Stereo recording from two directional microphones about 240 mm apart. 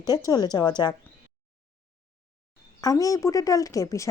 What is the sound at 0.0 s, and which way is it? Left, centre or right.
Speech, centre.